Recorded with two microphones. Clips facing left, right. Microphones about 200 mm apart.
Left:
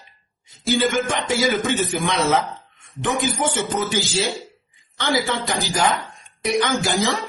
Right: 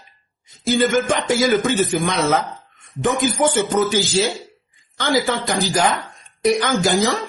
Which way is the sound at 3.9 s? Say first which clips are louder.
Right 4 dB; 40° right (ahead or behind).